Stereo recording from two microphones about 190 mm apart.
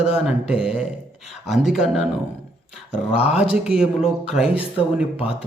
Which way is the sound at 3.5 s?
5° right (ahead or behind).